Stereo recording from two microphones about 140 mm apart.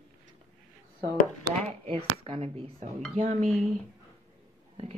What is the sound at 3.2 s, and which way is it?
Speech, 55° right (ahead or behind).